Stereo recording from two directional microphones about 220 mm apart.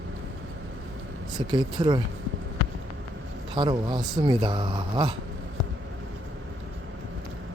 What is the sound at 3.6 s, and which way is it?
Speech, 20° right (ahead or behind).